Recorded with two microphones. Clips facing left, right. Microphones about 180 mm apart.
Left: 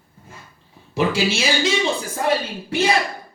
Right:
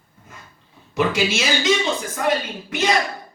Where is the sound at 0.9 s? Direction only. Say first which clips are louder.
Even; 30° left (ahead or behind).